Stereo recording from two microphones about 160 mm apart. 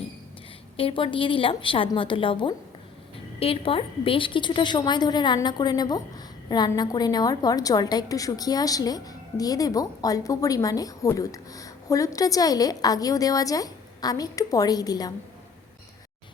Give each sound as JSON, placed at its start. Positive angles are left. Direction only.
{"t": 0.8, "sound": "a woman's voice", "side_deg": 35}